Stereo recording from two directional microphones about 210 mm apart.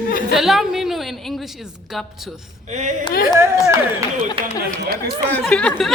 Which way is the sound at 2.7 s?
35° right (ahead or behind).